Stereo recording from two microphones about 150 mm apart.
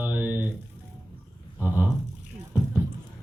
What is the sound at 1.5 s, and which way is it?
Speech, 15° right (ahead or behind).